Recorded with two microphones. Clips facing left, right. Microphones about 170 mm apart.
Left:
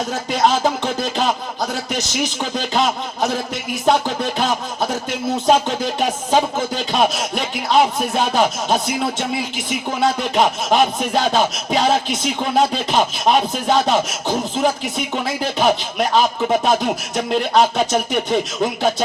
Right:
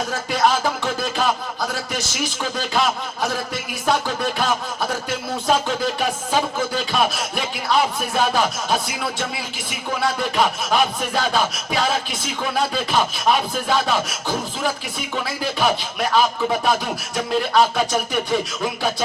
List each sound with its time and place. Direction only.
0.1 s speech: 20° left (ahead or behind)
17.5 s speech: 20° left (ahead or behind)